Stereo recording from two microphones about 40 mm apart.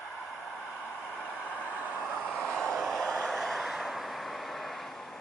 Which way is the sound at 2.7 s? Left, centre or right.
Centre.